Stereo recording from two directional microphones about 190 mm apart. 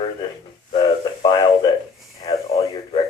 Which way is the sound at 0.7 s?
25° left (ahead or behind).